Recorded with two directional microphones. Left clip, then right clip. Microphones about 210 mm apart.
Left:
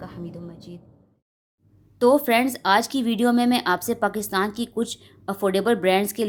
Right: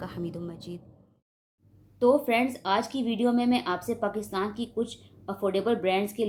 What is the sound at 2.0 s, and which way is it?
Speech, 50° left (ahead or behind).